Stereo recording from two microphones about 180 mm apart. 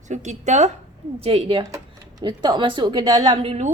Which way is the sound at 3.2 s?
35° right (ahead or behind).